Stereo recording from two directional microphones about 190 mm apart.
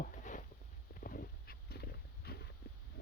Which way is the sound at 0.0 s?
45° left (ahead or behind).